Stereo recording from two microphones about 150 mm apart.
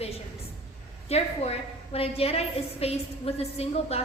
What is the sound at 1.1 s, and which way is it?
A woman's voice, 45° left (ahead or behind).